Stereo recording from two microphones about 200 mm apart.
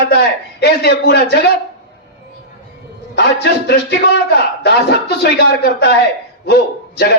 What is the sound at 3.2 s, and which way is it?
A man's voice, 55° left (ahead or behind).